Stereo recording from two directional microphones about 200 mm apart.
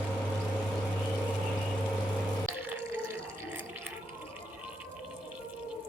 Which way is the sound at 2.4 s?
10° right (ahead or behind).